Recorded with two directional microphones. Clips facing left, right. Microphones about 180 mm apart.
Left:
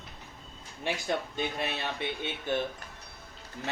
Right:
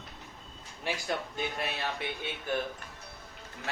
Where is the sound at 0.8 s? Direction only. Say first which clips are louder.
Left 2 dB; 25° left (ahead or behind).